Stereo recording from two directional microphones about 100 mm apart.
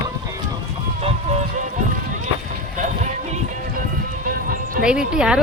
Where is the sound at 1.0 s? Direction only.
90° right.